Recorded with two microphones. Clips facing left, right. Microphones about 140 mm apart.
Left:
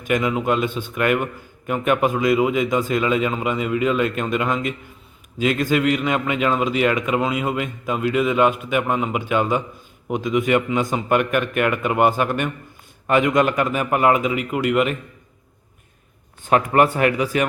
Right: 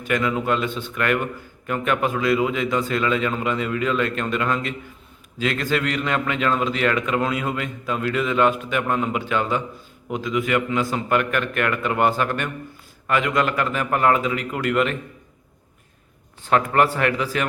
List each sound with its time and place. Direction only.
0.0 s a man's voice: 15° left (ahead or behind)
16.5 s a man's voice: 20° left (ahead or behind)